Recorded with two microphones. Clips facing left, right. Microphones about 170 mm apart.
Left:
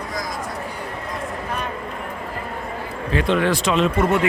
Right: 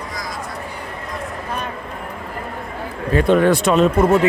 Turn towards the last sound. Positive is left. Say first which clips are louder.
# right 4 dB
turn(degrees=-40)  # may be behind; listen again after turning